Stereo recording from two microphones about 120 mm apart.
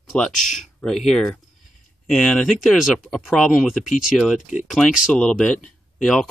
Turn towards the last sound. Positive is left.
turn(degrees=5)  # may be behind; listen again after turning